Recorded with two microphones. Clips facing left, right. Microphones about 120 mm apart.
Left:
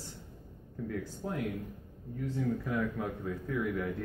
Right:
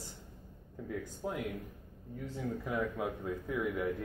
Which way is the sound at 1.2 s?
15° right (ahead or behind).